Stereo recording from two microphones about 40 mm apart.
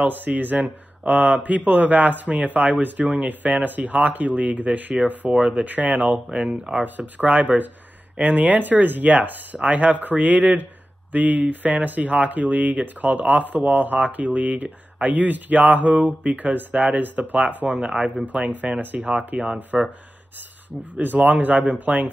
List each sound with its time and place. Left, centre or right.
0.0 s speech: right
5.3 s speech: centre
5.6 s speech: right
6.3 s speech: right
6.8 s speech: right
17.7 s speech: right
18.1 s speech: right
19.1 s speech: right
20.9 s speech: right